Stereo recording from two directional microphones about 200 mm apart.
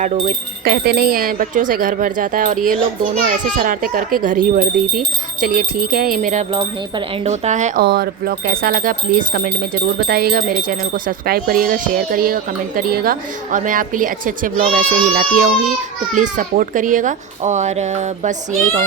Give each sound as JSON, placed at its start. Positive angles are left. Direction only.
{"t": 0.0, "sound": "speech", "side_deg": -40}
{"t": 7.9, "sound": "speech", "side_deg": -50}